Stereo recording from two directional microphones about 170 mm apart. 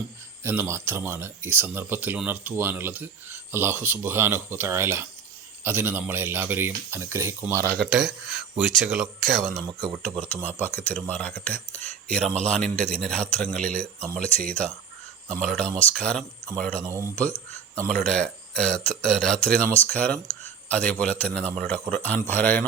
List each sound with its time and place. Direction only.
0.4 s speech: 15° right (ahead or behind)
7.7 s a man's voice: centre (ahead or behind)
16.8 s speech: 20° right (ahead or behind)
17.8 s a man's voice: 5° left (ahead or behind)